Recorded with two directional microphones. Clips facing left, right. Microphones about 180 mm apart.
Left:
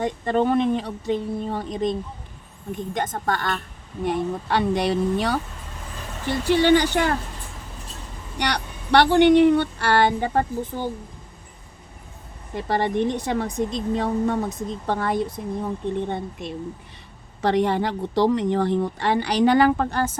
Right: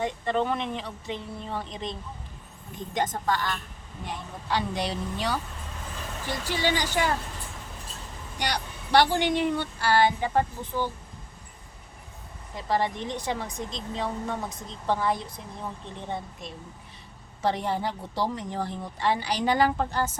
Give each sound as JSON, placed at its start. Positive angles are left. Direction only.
{"t": 0.0, "sound": "a woman's voice", "side_deg": 45}
{"t": 6.4, "sound": "a woman's voice", "side_deg": 60}
{"t": 8.4, "sound": "a woman's voice", "side_deg": 65}
{"t": 12.5, "sound": "a woman's voice", "side_deg": 60}